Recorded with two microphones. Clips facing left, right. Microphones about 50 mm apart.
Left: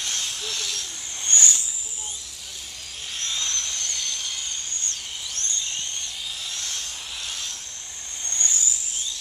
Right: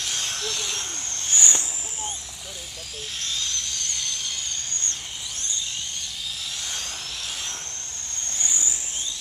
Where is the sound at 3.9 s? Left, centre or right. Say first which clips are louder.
Even; centre.